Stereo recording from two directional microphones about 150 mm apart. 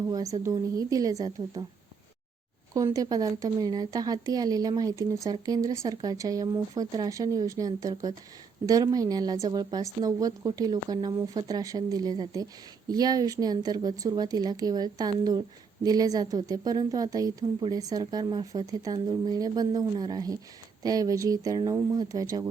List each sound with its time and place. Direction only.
0.1 s speech: 25° right (ahead or behind)
2.7 s speech: 25° right (ahead or behind)